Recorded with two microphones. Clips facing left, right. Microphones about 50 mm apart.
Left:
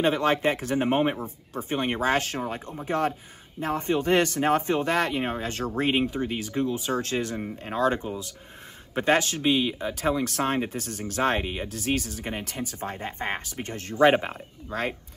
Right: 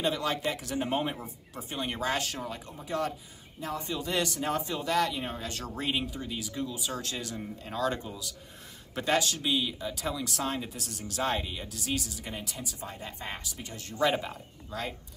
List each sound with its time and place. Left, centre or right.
0.0 s speech: left